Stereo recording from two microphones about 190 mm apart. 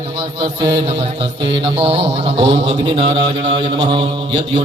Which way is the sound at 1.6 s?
30° right (ahead or behind).